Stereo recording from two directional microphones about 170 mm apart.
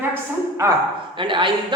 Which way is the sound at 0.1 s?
15° right (ahead or behind).